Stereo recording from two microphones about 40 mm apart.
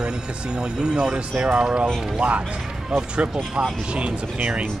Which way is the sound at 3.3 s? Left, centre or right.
Centre.